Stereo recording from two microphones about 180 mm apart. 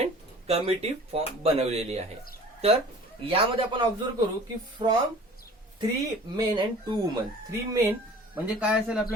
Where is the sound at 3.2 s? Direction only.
30° right (ahead or behind).